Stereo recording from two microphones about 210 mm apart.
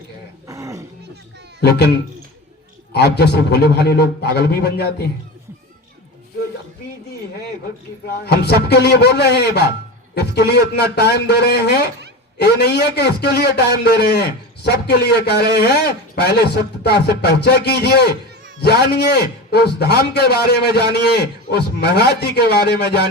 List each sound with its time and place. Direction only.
0.4 s a sound: 15° right (ahead or behind)
1.6 s a man's voice: 50° left (ahead or behind)
8.0 s a man's voice: 50° left (ahead or behind)